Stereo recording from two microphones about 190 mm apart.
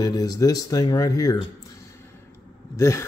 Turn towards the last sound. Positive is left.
turn(degrees=15)  # may be behind; listen again after turning